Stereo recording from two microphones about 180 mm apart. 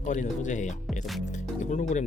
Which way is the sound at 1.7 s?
40° left (ahead or behind).